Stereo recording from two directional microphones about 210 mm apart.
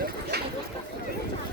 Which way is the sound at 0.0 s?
50° right (ahead or behind).